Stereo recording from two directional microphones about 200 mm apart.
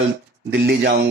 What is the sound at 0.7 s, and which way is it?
Speech, 55° right (ahead or behind).